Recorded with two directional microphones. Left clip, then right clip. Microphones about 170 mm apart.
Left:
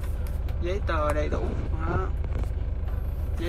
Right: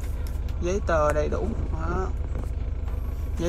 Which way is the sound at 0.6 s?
15° right (ahead or behind).